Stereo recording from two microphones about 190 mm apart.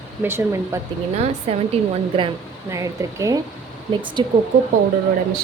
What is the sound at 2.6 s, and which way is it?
Speech, 15° right (ahead or behind).